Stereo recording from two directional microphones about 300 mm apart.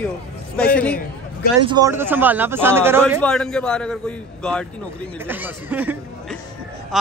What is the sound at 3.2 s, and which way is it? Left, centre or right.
A man's voice, centre.